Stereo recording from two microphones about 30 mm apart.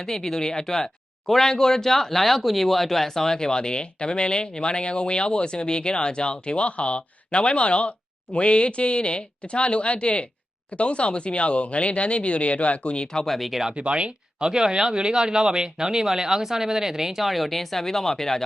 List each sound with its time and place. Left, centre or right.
0.0 s speech: centre; by 13.1 s left
13.2 s speech: centre
13.7 s speech: right
14.4 s speech: right; by 18.4 s centre